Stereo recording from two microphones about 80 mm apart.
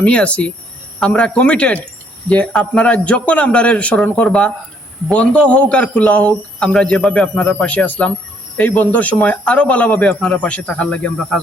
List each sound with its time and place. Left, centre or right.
0.0 s speech: centre